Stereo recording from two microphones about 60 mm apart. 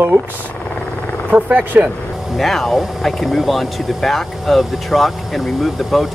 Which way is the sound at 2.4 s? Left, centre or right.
Centre.